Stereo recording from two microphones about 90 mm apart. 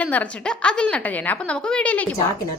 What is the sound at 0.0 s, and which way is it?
A woman's voice, 15° left (ahead or behind).